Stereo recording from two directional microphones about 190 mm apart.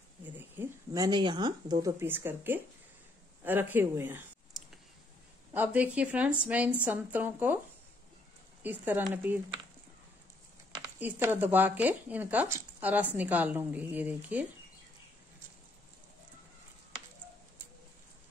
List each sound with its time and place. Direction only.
0.2 s speech: 10° right (ahead or behind)
5.5 s speech: 10° right (ahead or behind)
8.6 s speech: 10° right (ahead or behind)
11.0 s speech: 10° right (ahead or behind)